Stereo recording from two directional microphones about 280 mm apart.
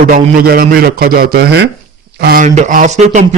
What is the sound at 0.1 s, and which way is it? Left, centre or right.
Speech, right.